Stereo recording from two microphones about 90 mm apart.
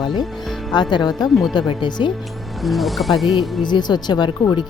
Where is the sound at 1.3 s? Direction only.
Centre (ahead or behind).